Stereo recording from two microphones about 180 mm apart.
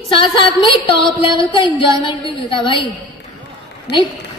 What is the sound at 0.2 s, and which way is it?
A woman's voice, 25° left (ahead or behind).